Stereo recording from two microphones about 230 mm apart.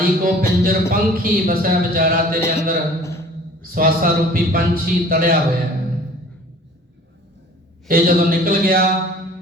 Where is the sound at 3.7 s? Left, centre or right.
Right.